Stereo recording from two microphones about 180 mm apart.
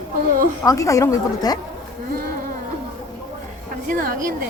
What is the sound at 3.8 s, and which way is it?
Speech, 50° right (ahead or behind).